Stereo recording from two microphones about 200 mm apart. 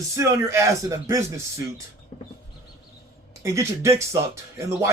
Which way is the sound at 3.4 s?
15° right (ahead or behind).